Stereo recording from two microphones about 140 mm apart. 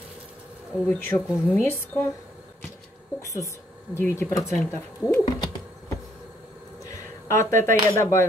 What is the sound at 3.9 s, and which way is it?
Speech, 20° left (ahead or behind).